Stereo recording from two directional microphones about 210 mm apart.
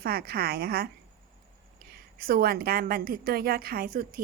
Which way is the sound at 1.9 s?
45° right (ahead or behind).